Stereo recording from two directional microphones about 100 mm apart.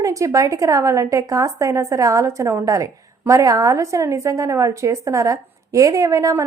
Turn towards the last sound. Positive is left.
turn(degrees=-35)  # may be behind; listen again after turning